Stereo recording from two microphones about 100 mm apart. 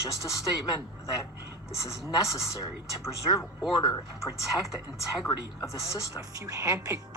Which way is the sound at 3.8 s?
45° left (ahead or behind).